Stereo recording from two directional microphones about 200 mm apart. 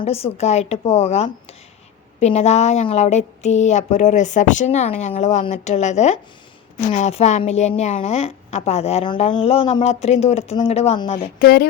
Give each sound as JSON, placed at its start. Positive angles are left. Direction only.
{"t": 0.0, "sound": "a woman's voice", "side_deg": 30}
{"t": 11.3, "sound": "speech", "side_deg": 50}